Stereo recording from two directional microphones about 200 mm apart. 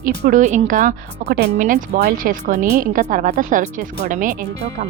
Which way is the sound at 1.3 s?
60° right (ahead or behind).